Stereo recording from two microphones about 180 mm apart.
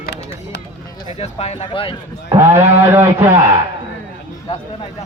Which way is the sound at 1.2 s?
35° left (ahead or behind).